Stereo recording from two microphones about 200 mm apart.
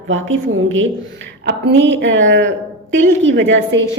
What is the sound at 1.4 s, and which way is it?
A woman's voice, 60° right (ahead or behind).